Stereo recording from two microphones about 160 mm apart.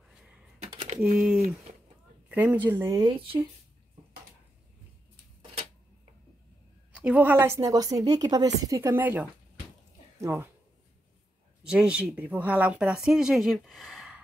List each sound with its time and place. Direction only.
1.1 s a woman's voice: 5° right (ahead or behind)
2.9 s speech: 25° right (ahead or behind)
6.9 s a woman's voice: 5° right (ahead or behind)
11.6 s speech: 5° right (ahead or behind)